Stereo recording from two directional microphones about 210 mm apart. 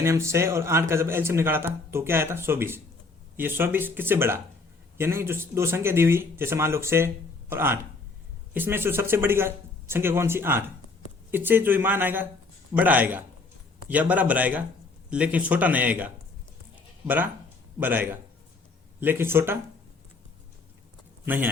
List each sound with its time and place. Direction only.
0.0 s speech: 15° right (ahead or behind)
17.7 s speech: 10° right (ahead or behind)
21.2 s speech: 10° right (ahead or behind)